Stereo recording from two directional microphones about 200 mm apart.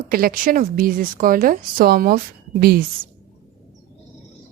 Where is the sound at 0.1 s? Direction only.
45° right (ahead or behind).